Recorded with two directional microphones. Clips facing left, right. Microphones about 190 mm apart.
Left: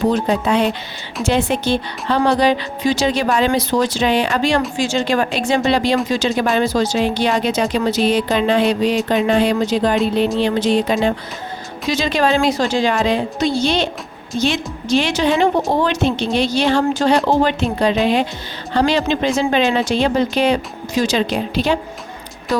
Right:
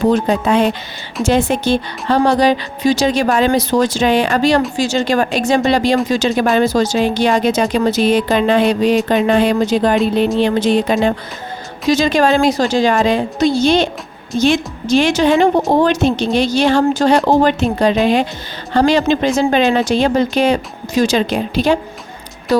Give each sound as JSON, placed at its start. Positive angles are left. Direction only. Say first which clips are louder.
{"t": 0.1, "sound": "speech", "louder": "right 3 dB", "side_deg": -50}